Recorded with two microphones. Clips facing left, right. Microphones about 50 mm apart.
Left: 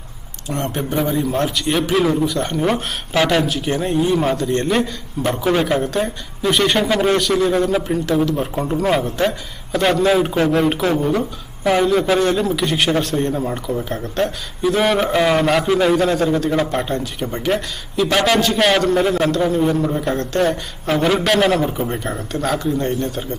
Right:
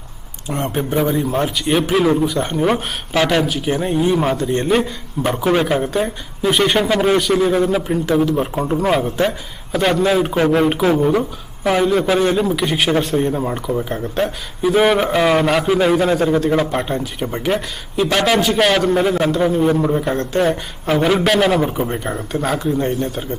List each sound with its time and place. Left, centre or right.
0.6 s speech: centre
8.4 s a man's voice: centre
21.6 s speech: centre
21.8 s speech: centre